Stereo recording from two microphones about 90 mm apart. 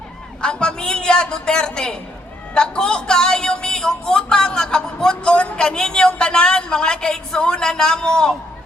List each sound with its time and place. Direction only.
0.4 s a man's voice: 10° left (ahead or behind)